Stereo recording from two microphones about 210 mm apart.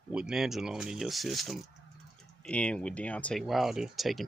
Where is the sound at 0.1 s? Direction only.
5° right (ahead or behind).